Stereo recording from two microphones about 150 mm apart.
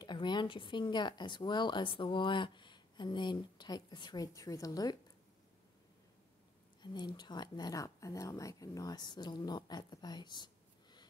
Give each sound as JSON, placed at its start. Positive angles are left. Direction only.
{"t": 0.0, "sound": "speech", "side_deg": 30}
{"t": 6.8, "sound": "speech", "side_deg": 30}